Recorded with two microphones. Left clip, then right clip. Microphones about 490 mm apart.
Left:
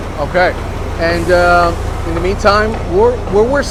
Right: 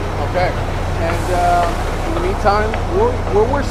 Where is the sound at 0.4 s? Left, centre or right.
Left.